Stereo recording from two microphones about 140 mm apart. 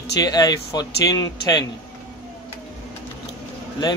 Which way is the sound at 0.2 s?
30° left (ahead or behind).